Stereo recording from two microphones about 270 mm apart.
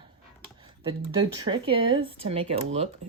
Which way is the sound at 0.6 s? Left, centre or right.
Centre.